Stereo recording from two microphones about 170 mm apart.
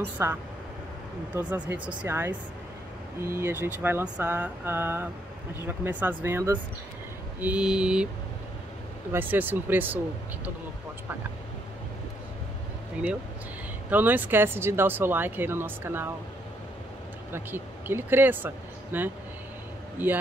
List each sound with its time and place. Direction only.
0.2 s speech: 15° right (ahead or behind)
7.3 s mantra: 10° right (ahead or behind)
9.1 s speech: 10° right (ahead or behind)
13.8 s speech: 10° right (ahead or behind)
17.3 s speech: 10° right (ahead or behind)